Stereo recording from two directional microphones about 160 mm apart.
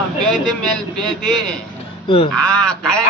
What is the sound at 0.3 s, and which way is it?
Speech, 5° left (ahead or behind).